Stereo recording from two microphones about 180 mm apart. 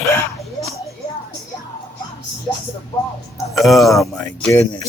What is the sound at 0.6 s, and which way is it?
Music, 15° left (ahead or behind).